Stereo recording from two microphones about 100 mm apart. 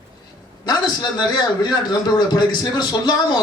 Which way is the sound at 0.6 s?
45° left (ahead or behind).